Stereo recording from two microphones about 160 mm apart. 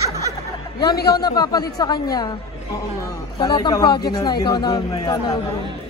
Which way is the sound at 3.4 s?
25° left (ahead or behind).